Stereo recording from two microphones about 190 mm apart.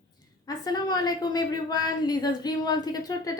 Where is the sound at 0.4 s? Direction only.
20° left (ahead or behind).